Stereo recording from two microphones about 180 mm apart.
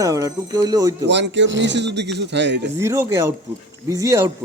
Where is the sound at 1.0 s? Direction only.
75° right (ahead or behind).